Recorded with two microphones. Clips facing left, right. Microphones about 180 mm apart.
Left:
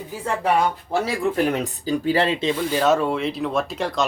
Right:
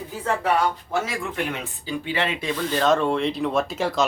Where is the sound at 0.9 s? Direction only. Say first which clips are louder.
Left 5 dB; 35° left (ahead or behind).